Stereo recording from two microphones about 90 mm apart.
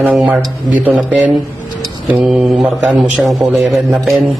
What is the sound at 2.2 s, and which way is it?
A man's voice, centre (ahead or behind).